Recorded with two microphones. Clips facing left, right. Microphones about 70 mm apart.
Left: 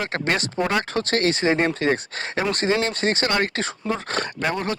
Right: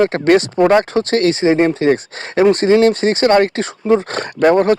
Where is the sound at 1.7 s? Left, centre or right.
Right.